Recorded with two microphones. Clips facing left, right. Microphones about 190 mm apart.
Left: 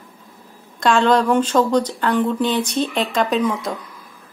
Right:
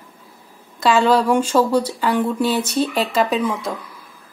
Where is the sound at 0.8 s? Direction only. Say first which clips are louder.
Even; 5° right (ahead or behind).